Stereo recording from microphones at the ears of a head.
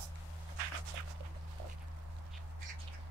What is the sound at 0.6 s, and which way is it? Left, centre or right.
Walk, right.